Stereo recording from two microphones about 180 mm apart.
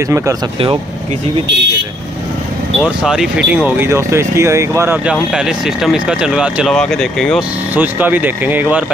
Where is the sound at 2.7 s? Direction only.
5° right (ahead or behind).